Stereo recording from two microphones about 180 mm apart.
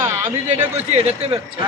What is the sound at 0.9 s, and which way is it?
Speech, 35° right (ahead or behind).